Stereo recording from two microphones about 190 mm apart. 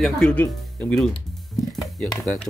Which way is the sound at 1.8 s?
20° left (ahead or behind).